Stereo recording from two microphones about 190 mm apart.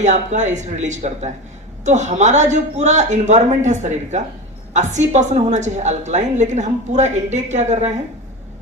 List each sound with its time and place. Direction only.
0.0 s a woman's voice: 40° right (ahead or behind)